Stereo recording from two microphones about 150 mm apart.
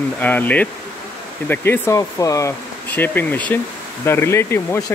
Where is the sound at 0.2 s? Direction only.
10° left (ahead or behind).